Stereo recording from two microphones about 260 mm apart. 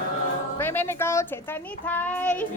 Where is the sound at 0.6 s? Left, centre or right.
Centre.